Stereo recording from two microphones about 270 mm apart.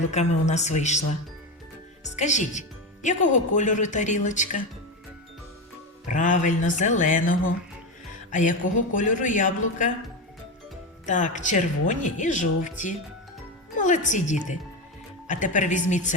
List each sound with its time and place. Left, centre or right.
0.0 s speech: left
2.0 s speech: left
6.1 s speech: left
11.0 s speech: left